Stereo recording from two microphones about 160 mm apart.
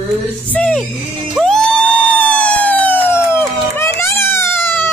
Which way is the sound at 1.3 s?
Centre (ahead or behind).